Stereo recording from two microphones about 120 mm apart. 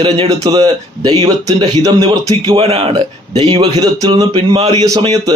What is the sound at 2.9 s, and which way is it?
Speech, 35° right (ahead or behind).